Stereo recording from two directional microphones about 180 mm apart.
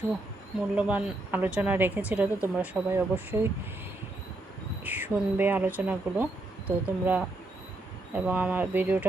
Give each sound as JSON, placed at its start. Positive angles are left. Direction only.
{"t": 0.8, "sound": "speech", "side_deg": -5}
{"t": 4.8, "sound": "speech", "side_deg": -10}